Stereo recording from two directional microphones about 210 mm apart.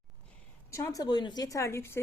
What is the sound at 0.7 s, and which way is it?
A woman's voice, 15° left (ahead or behind).